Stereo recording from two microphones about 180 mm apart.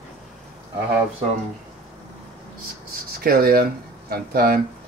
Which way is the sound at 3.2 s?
55° right (ahead or behind).